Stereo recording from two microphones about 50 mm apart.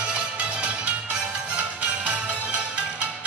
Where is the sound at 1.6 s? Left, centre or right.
Right.